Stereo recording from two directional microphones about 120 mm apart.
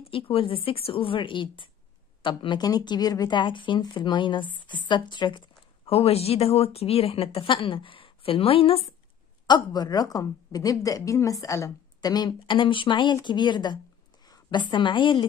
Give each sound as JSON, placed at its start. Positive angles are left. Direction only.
{"t": 0.0, "sound": "a woman's voice", "side_deg": 50}
{"t": 5.9, "sound": "speech", "side_deg": 55}
{"t": 9.5, "sound": "a woman's voice", "side_deg": 35}